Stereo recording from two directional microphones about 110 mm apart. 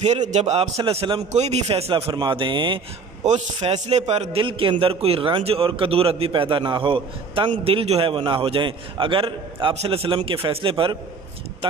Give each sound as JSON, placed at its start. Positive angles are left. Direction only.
{"t": 0.0, "sound": "a man's voice", "side_deg": -90}
{"t": 0.8, "sound": "a man's voice", "side_deg": -50}
{"t": 1.3, "sound": "a man's voice", "side_deg": -90}
{"t": 3.2, "sound": "a man's voice", "side_deg": -90}
{"t": 4.4, "sound": "a man's voice", "side_deg": -50}
{"t": 7.6, "sound": "a man's voice", "side_deg": -65}